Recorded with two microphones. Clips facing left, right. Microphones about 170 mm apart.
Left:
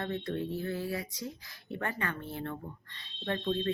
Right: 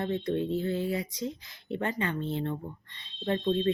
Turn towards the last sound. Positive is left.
turn(degrees=-20)  # may be behind; listen again after turning